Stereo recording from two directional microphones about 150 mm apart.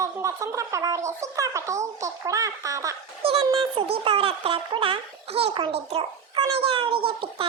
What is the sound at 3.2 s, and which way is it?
A child's voice, 40° right (ahead or behind).